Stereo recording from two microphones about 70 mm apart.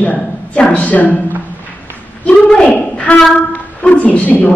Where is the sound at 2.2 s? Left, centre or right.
Centre.